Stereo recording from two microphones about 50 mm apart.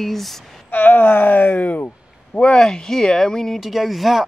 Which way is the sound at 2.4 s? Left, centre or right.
Centre.